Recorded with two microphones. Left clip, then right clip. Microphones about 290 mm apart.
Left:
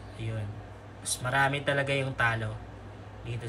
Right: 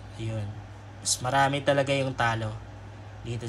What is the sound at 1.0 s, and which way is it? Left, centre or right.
Speech, centre.